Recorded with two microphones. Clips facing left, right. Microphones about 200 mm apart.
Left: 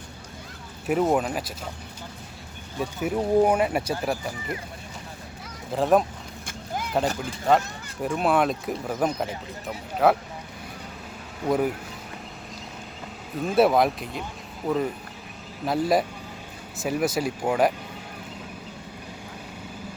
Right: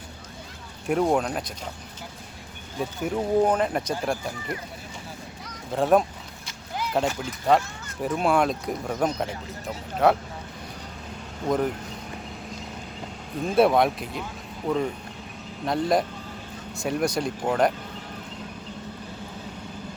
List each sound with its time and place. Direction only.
0.9 s speech: 5° left (ahead or behind)
2.7 s speech: 5° left (ahead or behind)
5.7 s speech: centre (ahead or behind)
6.4 s horse: 50° left (ahead or behind)
8.0 s speech: centre (ahead or behind)
11.4 s speech: 5° left (ahead or behind)
13.4 s speech: centre (ahead or behind)